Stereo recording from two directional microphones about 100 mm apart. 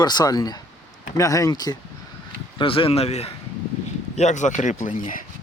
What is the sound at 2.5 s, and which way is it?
Speech, 65° left (ahead or behind).